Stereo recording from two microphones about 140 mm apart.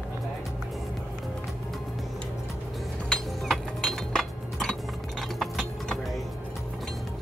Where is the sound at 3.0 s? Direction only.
Centre (ahead or behind).